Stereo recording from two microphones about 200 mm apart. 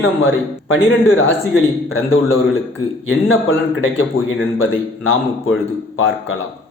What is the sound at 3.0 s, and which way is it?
A man's voice, 80° left.